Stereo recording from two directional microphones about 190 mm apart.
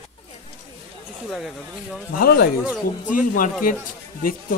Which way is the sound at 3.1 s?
45° left (ahead or behind).